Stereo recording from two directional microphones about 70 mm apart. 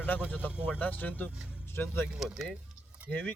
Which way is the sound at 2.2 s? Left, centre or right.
Centre.